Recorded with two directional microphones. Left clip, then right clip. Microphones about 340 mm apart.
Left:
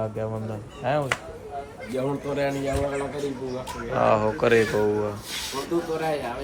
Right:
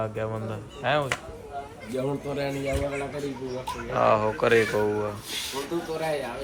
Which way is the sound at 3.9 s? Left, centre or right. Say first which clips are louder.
Left 1 dB; centre.